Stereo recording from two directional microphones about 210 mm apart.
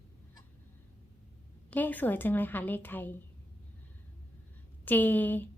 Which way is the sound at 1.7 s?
10° left (ahead or behind).